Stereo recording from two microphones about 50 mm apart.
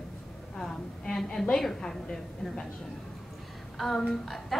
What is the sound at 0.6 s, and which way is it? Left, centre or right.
A woman's voice, centre.